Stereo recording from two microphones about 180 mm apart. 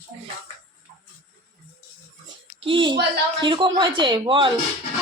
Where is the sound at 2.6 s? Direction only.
30° right (ahead or behind).